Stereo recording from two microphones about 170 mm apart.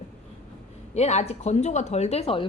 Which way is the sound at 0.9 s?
40° left (ahead or behind).